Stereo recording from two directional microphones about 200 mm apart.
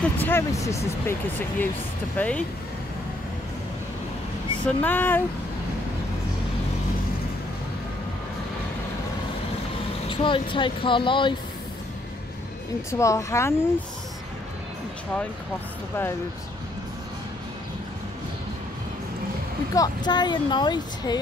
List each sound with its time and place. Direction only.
0.0 s speech: 10° left (ahead or behind)
2.1 s speech: 5° left (ahead or behind)
4.6 s speech: 10° left (ahead or behind)
10.0 s speech: 25° left (ahead or behind)
12.9 s speech: 15° left (ahead or behind)
19.7 s speech: 20° left (ahead or behind)